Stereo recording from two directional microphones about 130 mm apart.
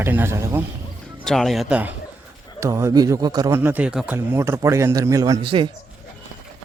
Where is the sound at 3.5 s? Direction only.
15° right (ahead or behind).